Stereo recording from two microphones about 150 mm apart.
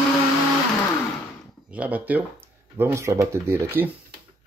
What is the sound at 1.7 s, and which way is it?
Speech, 10° right (ahead or behind).